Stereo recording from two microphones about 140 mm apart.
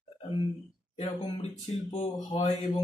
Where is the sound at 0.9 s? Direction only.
45° left (ahead or behind).